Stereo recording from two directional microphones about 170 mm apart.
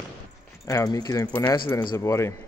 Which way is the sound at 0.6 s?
20° left (ahead or behind).